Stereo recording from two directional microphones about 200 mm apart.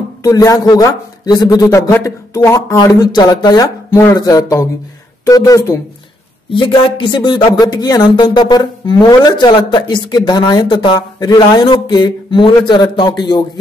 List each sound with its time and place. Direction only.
0.2 s a man's voice: 15° left (ahead or behind)
6.5 s speech: 25° left (ahead or behind)